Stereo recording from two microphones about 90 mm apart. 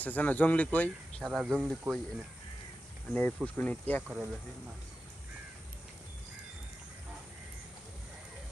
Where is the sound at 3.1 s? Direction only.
15° left (ahead or behind).